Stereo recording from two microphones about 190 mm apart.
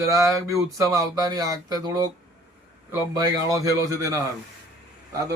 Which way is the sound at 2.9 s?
20° right (ahead or behind).